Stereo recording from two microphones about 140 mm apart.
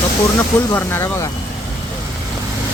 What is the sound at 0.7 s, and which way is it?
Speech, 20° left (ahead or behind).